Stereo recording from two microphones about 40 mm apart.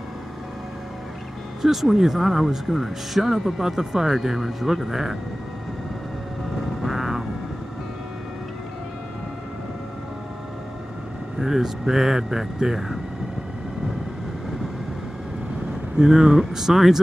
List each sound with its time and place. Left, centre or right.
1.6 s speech: centre
6.8 s vehicle: centre
11.3 s speech: centre
16.0 s speech: centre